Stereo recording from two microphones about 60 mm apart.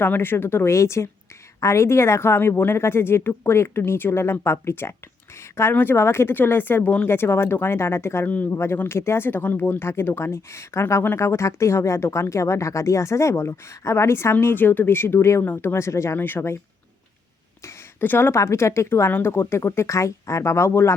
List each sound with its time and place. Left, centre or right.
0.0 s a woman's voice: left
14.4 s a woman's voice: left
16.1 s speech: left
18.0 s speech: left
18.3 s a woman's voice: left